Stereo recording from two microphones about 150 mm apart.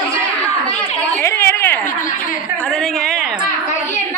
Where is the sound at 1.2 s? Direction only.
20° left (ahead or behind).